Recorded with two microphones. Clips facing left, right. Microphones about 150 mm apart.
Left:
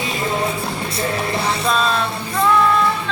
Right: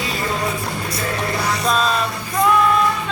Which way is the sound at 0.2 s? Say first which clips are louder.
Left 3 dB; 25° left (ahead or behind).